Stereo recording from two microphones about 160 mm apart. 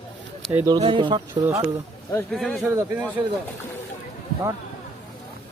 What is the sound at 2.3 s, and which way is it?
Speech, centre (ahead or behind).